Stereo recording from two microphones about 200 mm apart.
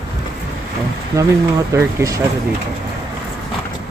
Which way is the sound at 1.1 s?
15° right (ahead or behind).